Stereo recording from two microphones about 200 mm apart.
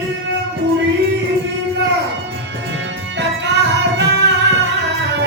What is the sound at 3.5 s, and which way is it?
Music, 60° right (ahead or behind).